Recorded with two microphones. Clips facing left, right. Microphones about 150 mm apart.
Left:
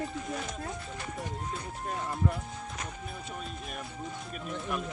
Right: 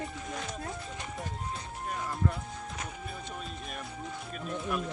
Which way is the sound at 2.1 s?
Centre (ahead or behind).